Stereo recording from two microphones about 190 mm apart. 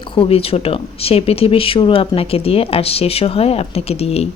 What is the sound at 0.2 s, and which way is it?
Speech, 30° left (ahead or behind).